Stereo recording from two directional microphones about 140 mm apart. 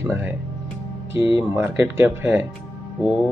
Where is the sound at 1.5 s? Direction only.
15° right (ahead or behind).